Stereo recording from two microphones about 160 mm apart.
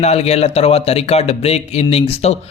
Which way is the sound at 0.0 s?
40° left (ahead or behind).